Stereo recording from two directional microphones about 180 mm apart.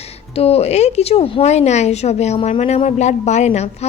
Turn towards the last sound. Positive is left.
turn(degrees=35)  # may be behind; listen again after turning